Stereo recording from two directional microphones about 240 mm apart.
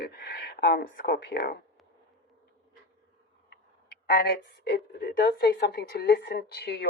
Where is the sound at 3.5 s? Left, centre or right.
Left.